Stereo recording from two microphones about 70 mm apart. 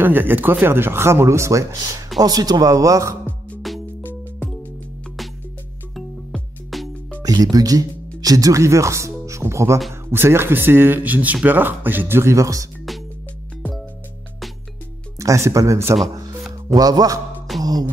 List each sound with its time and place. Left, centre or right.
0.0 s speech: right
2.1 s speech: right
3.7 s music: centre
4.0 s music: left
6.7 s music: centre
7.5 s speech: right
15.1 s speech: right
16.6 s speech: right
17.6 s music: right